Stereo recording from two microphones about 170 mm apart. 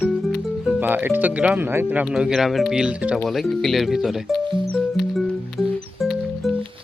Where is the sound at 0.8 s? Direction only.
10° right (ahead or behind).